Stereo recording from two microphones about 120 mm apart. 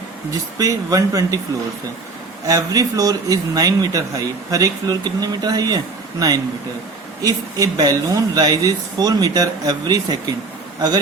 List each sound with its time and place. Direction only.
0.6 s speech: 30° right (ahead or behind)
2.5 s a man's voice: 30° right (ahead or behind)